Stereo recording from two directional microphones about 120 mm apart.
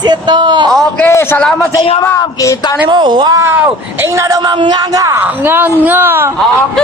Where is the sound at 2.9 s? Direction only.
40° right (ahead or behind).